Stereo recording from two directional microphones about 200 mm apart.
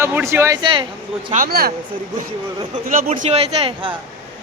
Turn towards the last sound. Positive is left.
turn(degrees=-25)  # may be behind; listen again after turning